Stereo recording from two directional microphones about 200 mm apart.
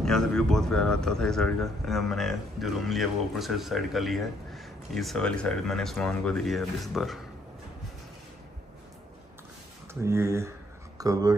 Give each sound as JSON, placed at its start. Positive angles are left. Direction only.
{"t": 0.0, "sound": "speech", "side_deg": 5}
{"t": 10.0, "sound": "speech", "side_deg": -15}